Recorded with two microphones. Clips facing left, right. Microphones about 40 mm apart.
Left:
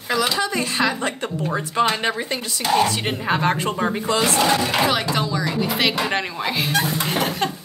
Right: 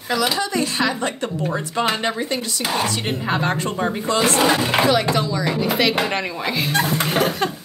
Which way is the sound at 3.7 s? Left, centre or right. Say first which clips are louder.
Even; centre.